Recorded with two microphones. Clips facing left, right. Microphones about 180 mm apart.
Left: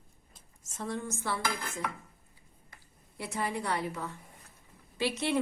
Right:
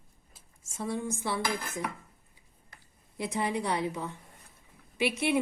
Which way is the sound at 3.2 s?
15° right (ahead or behind).